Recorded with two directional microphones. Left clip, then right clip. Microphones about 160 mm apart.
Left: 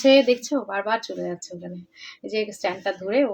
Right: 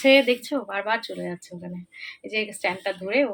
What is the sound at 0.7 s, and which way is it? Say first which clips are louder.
Speech: even; 5° left (ahead or behind).